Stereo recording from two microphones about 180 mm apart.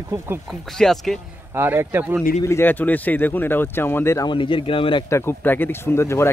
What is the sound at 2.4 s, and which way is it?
Speech, 15° left (ahead or behind).